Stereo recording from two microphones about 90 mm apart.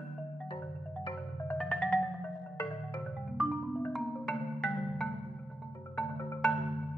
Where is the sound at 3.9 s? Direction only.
Centre (ahead or behind).